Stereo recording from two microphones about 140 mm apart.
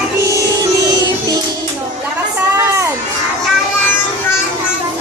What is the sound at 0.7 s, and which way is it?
Music, 25° right (ahead or behind).